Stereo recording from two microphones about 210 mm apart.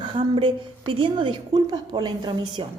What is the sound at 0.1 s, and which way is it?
A woman's voice, 25° right (ahead or behind).